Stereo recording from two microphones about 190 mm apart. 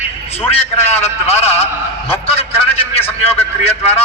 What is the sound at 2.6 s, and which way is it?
A man's voice, 30° left (ahead or behind).